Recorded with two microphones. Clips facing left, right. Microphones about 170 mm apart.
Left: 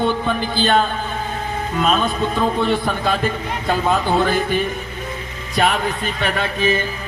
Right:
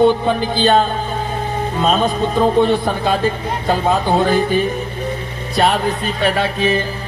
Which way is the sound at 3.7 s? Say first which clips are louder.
Right 2 dB; 40° right (ahead or behind).